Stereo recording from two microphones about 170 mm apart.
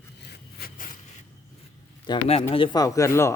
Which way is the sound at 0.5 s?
60° left (ahead or behind).